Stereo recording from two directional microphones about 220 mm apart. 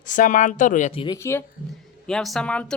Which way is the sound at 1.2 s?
10° left (ahead or behind).